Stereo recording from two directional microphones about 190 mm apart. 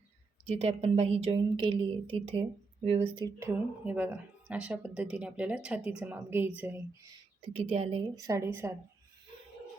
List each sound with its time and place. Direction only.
0.4 s a woman's voice: 30° right (ahead or behind)
3.8 s speech: 10° right (ahead or behind)
7.4 s a woman's voice: 30° right (ahead or behind)
8.1 s speech: 15° right (ahead or behind)